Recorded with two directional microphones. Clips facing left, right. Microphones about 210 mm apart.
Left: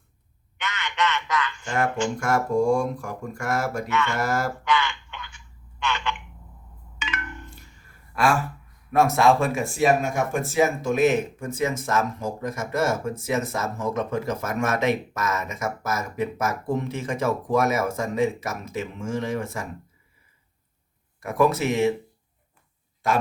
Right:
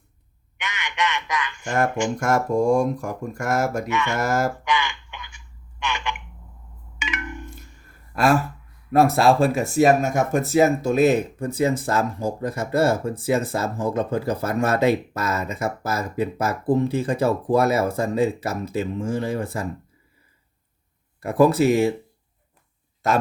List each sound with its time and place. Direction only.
0.6 s a sound: 15° right (ahead or behind)
1.6 s speech: 45° right (ahead or behind)
3.8 s speech: 15° right (ahead or behind)
4.2 s speech: 40° right (ahead or behind)
4.6 s a sound: 15° right (ahead or behind)
5.8 s telephone: 15° right (ahead or behind)
7.0 s a sound: 15° right (ahead or behind)
8.1 s speech: 40° right (ahead or behind)
21.2 s speech: 35° right (ahead or behind)